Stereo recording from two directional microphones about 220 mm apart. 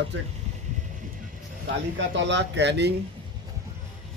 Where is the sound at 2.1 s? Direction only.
55° right (ahead or behind).